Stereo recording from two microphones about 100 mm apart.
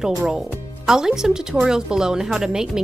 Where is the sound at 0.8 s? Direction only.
5° right (ahead or behind).